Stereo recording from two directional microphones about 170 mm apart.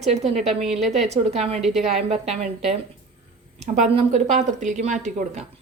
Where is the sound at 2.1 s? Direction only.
40° right (ahead or behind).